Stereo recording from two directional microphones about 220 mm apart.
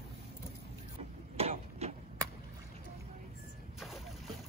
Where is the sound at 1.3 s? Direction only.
30° right (ahead or behind).